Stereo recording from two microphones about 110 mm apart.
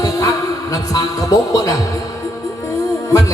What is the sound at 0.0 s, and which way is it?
A man's voice, 35° left (ahead or behind).